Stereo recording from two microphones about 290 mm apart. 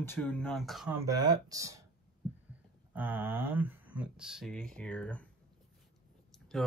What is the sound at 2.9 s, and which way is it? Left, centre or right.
Speech, centre.